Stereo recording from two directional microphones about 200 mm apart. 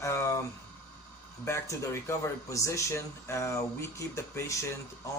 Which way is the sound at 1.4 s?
15° left (ahead or behind).